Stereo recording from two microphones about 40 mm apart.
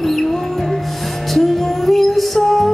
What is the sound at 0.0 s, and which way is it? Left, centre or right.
Music, centre.